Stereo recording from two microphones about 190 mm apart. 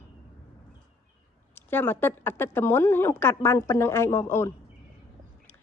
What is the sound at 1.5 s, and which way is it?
A woman's voice, 10° left (ahead or behind).